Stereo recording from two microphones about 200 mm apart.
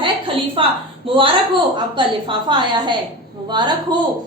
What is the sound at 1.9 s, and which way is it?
A woman's voice, 25° right (ahead or behind).